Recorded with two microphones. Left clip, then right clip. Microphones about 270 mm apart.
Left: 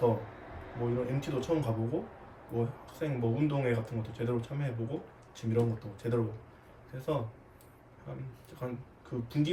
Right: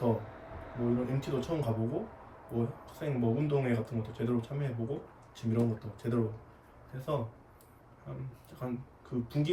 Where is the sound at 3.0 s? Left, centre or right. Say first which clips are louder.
Left 1 dB; centre.